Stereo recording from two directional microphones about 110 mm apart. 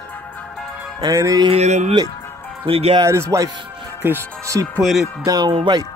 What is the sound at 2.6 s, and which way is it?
Speech, 60° right (ahead or behind).